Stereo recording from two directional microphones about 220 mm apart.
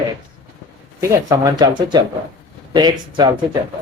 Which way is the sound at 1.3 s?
15° right (ahead or behind).